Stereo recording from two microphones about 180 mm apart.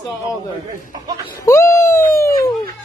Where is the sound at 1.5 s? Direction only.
15° left (ahead or behind).